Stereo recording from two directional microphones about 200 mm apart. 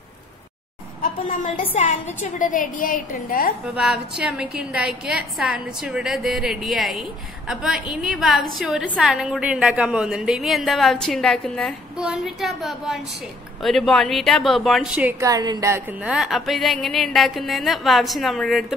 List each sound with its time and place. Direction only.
2.3 s a woman's voice: 40° left (ahead or behind)
3.7 s a woman's voice: 5° right (ahead or behind)